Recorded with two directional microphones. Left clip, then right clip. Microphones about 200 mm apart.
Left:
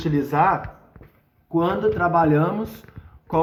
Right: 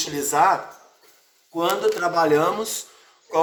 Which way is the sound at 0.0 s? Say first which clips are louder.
Even; 15° right (ahead or behind).